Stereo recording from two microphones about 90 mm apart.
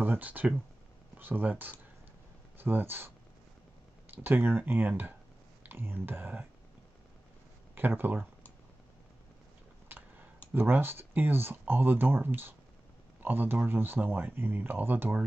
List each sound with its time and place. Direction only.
0.0 s speech: 20° right (ahead or behind)
4.1 s speech: 25° right (ahead or behind)
7.7 s speech: 25° right (ahead or behind)
9.9 s a sound: 25° right (ahead or behind)
10.5 s speech: 25° right (ahead or behind)